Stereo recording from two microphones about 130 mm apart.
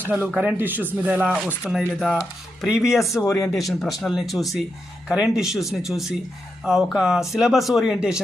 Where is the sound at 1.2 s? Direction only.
Centre (ahead or behind).